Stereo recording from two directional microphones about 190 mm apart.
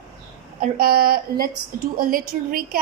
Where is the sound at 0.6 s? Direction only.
50° right (ahead or behind).